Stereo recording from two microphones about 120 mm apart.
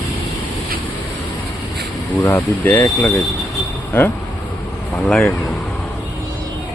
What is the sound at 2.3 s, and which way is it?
Speech, 15° left (ahead or behind).